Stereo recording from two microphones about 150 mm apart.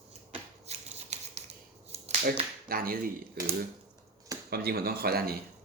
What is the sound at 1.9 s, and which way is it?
Finger snapping, 45° right (ahead or behind).